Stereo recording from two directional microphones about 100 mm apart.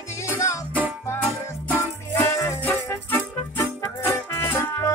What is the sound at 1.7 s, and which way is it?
Music, 20° left (ahead or behind).